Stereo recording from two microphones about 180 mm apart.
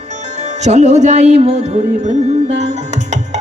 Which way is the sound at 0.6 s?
40° right (ahead or behind).